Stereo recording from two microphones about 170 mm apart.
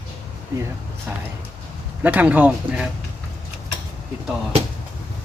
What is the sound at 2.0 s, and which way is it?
Speech, 10° right (ahead or behind).